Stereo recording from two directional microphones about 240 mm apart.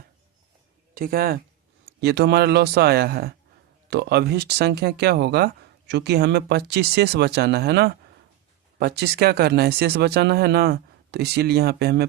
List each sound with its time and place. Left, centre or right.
0.9 s speech: right